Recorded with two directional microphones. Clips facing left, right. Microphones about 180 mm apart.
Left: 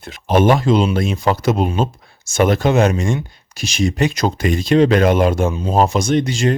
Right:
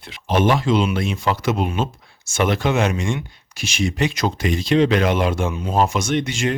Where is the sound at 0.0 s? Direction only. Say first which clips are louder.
Left 4 dB; 45° left (ahead or behind).